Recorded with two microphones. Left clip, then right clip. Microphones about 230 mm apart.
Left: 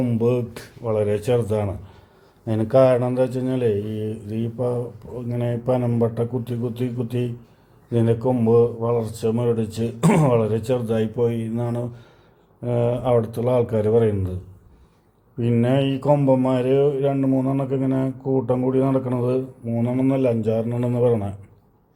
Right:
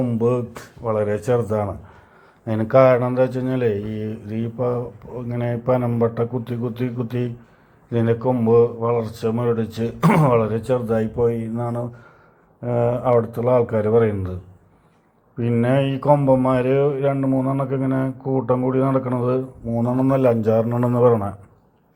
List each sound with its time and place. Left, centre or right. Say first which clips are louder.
0.3 s speech: even; centre
0.8 s speech: even; centre
15.4 s speech: right 1 dB; centre